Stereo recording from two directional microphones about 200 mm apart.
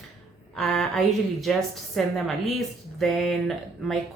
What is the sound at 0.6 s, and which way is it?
Speech, 5° left (ahead or behind).